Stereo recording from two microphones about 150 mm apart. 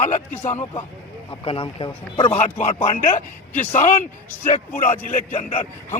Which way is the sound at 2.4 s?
50° left (ahead or behind).